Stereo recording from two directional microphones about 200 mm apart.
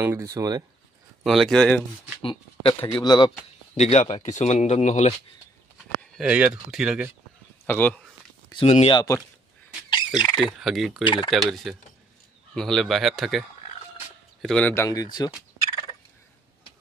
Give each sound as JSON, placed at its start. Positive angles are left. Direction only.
{"t": 0.0, "sound": "speech", "side_deg": -15}
{"t": 1.2, "sound": "speech", "side_deg": 0}
{"t": 2.2, "sound": "speech", "side_deg": 25}
{"t": 3.7, "sound": "speech", "side_deg": 35}
{"t": 6.1, "sound": "speech", "side_deg": -5}
{"t": 7.6, "sound": "speech", "side_deg": 10}
{"t": 8.6, "sound": "speech", "side_deg": 35}
{"t": 8.9, "sound": "speech", "side_deg": 15}
{"t": 9.8, "sound": "bird", "side_deg": 20}
{"t": 10.4, "sound": "speech", "side_deg": 0}
{"t": 12.5, "sound": "speech", "side_deg": 0}